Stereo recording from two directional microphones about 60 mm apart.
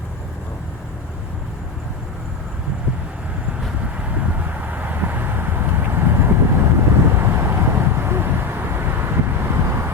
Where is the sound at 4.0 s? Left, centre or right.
Right.